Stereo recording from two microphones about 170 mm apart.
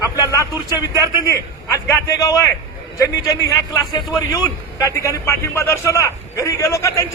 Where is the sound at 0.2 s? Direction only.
20° left (ahead or behind).